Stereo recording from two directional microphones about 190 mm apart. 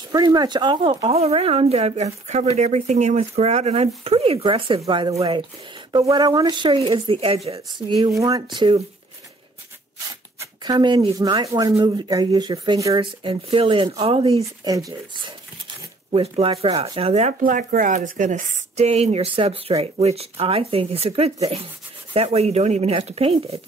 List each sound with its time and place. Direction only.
0.1 s speech: 20° right (ahead or behind)
10.4 s speech: 20° right (ahead or behind)
14.6 s speech: 20° right (ahead or behind)
16.1 s speech: 30° right (ahead or behind)